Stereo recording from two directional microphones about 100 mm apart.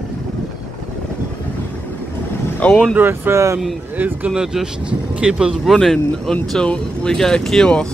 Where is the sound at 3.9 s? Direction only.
15° right (ahead or behind).